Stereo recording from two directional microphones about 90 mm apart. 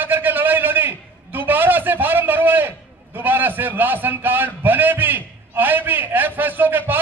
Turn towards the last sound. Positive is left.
turn(degrees=-20)  # may be behind; listen again after turning